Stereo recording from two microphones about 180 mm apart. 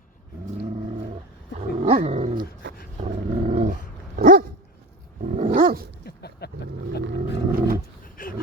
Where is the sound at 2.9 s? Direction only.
35° right (ahead or behind).